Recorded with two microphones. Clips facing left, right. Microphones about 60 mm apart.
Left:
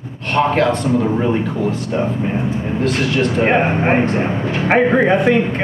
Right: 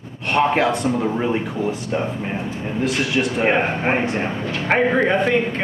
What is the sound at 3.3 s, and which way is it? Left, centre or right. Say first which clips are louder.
Speech: left 3 dB; centre.